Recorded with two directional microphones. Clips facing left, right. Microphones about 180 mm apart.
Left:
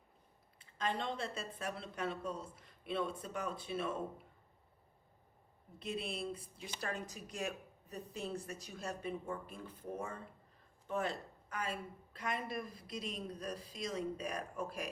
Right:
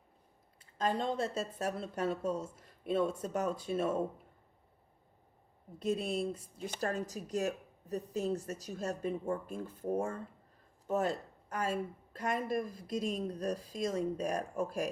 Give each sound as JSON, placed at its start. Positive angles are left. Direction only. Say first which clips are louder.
{"t": 0.6, "sound": "speech", "louder": "right 5 dB", "side_deg": -40}
{"t": 5.8, "sound": "speech", "louder": "right 8 dB", "side_deg": -45}